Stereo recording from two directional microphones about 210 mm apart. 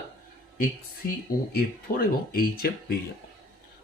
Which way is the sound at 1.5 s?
45° left (ahead or behind).